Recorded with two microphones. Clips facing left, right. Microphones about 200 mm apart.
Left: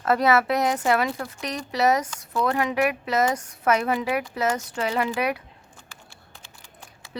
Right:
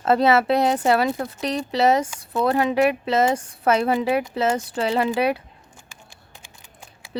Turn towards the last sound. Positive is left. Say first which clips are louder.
# right 1 dB
turn(degrees=-15)  # may be behind; listen again after turning